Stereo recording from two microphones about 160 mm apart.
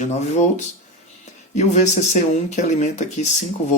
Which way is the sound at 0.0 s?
45° left (ahead or behind).